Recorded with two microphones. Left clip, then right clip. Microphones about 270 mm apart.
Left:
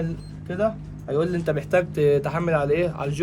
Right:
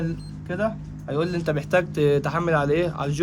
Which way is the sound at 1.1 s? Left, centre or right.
Centre.